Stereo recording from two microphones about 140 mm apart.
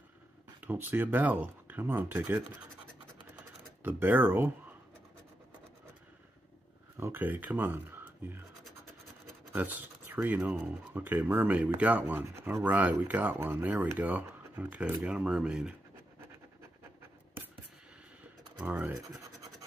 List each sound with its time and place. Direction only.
0.7 s speech: 15° right (ahead or behind)
3.8 s speech: 15° right (ahead or behind)
7.0 s speech: 15° right (ahead or behind)
9.5 s speech: 15° right (ahead or behind)
18.6 s speech: 10° right (ahead or behind)
18.9 s scratch: 25° right (ahead or behind)